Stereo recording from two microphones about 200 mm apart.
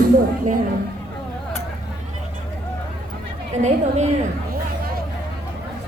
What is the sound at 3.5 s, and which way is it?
Speech, 35° right (ahead or behind).